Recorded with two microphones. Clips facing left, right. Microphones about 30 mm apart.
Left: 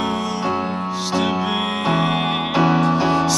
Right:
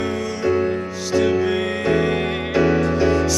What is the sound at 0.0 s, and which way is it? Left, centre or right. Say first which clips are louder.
Music: even; left.